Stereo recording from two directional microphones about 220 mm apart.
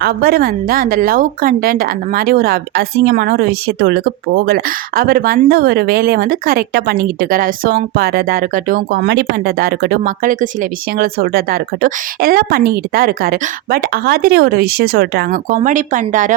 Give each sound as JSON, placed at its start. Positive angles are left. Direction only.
{"t": 0.0, "sound": "speech", "side_deg": -45}